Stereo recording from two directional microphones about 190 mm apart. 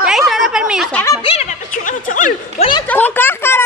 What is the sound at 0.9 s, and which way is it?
Speech, 15° left (ahead or behind).